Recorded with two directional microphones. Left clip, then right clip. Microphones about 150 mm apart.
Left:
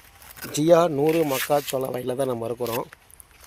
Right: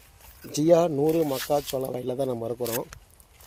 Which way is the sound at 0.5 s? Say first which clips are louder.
Left 2 dB; 5° left (ahead or behind).